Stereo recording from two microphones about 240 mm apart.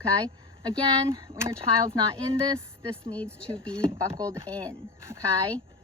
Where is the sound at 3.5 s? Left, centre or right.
Right.